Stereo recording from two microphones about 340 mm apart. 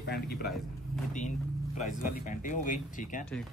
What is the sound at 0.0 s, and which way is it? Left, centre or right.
Speech, left.